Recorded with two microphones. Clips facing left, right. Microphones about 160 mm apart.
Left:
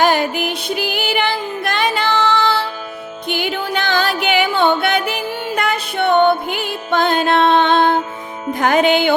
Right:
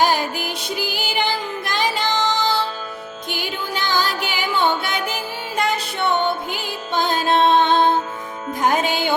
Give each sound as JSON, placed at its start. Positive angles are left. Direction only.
{"t": 0.0, "sound": "music", "side_deg": 65}
{"t": 8.5, "sound": "music", "side_deg": 75}